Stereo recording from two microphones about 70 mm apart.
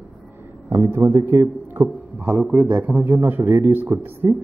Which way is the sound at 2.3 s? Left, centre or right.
Right.